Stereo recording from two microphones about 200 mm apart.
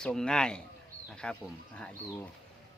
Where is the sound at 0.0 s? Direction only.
5° left (ahead or behind).